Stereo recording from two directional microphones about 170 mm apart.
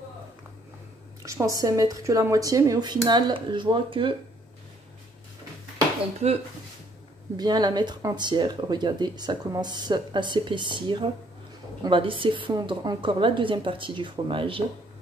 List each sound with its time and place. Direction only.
1.2 s speech: 20° right (ahead or behind)
7.3 s speech: 25° right (ahead or behind)